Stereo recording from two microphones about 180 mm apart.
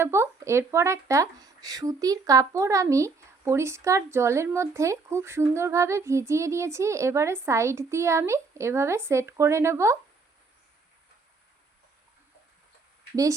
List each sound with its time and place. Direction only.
0.0 s speech: 15° right (ahead or behind)